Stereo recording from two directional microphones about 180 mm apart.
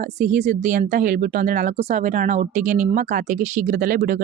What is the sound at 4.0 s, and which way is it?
Speech, 60° right (ahead or behind).